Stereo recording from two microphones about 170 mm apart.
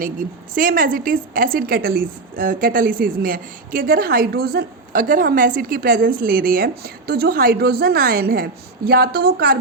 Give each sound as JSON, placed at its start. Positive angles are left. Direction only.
{"t": 0.0, "sound": "a woman's voice", "side_deg": -55}